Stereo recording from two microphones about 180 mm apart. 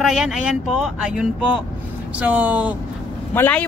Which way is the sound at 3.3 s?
10° left (ahead or behind).